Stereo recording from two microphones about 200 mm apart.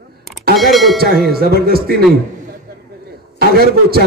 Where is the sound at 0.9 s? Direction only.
50° right (ahead or behind).